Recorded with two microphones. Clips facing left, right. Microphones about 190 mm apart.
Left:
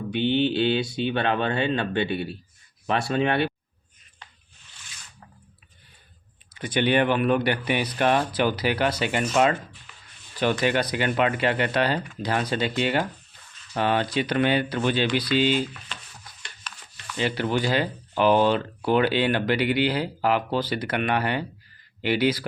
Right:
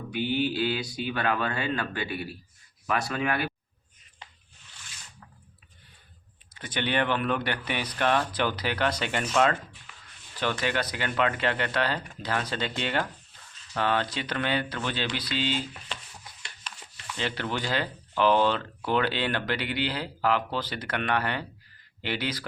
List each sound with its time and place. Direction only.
0.1 s speech: 25° left (ahead or behind)
6.5 s speech: 10° left (ahead or behind)
17.2 s speech: 10° left (ahead or behind)